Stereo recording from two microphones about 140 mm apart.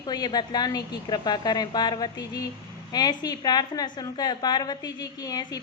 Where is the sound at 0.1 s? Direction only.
30° left (ahead or behind).